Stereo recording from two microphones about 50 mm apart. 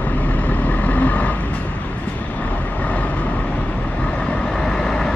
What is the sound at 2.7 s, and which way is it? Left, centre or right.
Vehicle, left.